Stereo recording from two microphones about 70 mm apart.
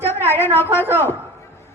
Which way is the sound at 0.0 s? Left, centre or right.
Left.